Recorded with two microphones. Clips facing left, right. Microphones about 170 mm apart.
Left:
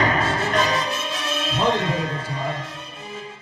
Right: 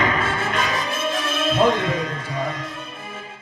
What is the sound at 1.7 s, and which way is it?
Music, 30° left (ahead or behind).